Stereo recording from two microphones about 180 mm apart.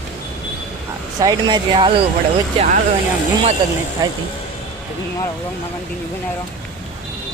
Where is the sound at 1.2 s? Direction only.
25° right (ahead or behind).